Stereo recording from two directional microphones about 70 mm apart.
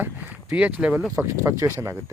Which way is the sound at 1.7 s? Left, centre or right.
Right.